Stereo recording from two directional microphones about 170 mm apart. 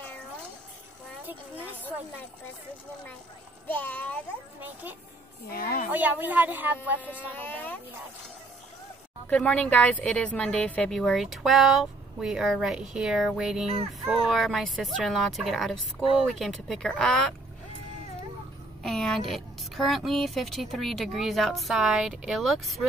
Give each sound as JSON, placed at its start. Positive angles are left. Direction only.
{"t": 3.6, "sound": "a child's voice", "side_deg": 10}
{"t": 4.6, "sound": "a woman's voice", "side_deg": -10}
{"t": 5.5, "sound": "a woman's voice", "side_deg": 60}
{"t": 5.9, "sound": "a woman's voice", "side_deg": -10}
{"t": 7.3, "sound": "a child's voice", "side_deg": 10}
{"t": 9.3, "sound": "a woman's voice", "side_deg": 5}
{"t": 18.8, "sound": "a woman's voice", "side_deg": 0}